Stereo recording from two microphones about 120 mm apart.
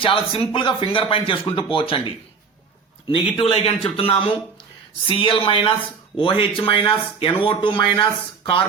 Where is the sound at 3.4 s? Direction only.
55° left (ahead or behind).